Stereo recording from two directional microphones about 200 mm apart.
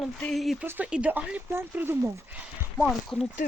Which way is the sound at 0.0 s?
5° left (ahead or behind).